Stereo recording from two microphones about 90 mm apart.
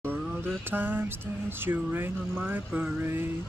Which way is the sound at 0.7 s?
20° right (ahead or behind).